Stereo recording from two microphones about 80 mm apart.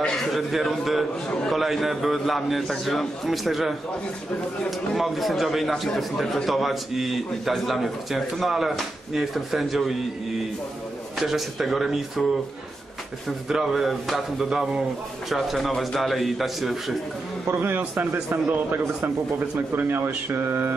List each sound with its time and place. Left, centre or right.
0.0 s a man's voice: centre
11.1 s a man's voice: centre
13.5 s a man's voice: centre
17.6 s a man's voice: right